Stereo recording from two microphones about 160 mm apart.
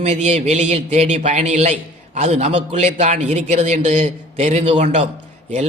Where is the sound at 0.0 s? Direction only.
45° right (ahead or behind).